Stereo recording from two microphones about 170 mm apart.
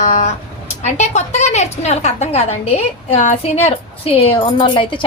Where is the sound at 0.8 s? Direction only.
40° left (ahead or behind).